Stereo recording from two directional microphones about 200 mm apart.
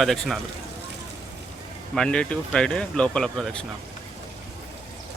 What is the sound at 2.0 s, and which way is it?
Speech, 5° left (ahead or behind).